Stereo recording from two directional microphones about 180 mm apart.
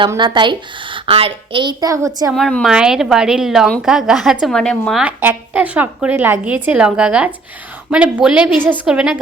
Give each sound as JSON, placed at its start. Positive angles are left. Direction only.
{"t": 0.1, "sound": "a woman's voice", "side_deg": -25}
{"t": 2.3, "sound": "a woman's voice", "side_deg": 5}